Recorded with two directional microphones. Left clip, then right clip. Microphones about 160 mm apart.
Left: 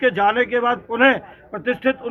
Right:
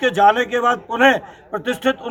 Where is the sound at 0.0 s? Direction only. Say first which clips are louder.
Right 3 dB; 25° right (ahead or behind).